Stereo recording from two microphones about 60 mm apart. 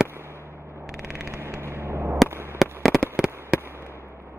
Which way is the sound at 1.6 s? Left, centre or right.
Right.